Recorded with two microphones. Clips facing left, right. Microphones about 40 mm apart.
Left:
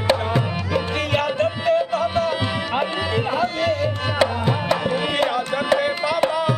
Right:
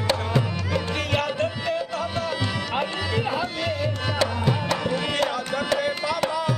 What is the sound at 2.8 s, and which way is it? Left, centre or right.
Music, centre.